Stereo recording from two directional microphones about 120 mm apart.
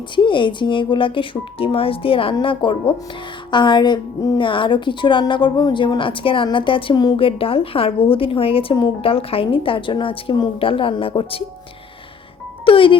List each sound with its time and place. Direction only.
0.2 s a woman's voice: 40° left (ahead or behind)
4.4 s a woman's voice: 45° left (ahead or behind)
7.2 s a woman's voice: 50° left (ahead or behind)
12.6 s speech: 45° left (ahead or behind)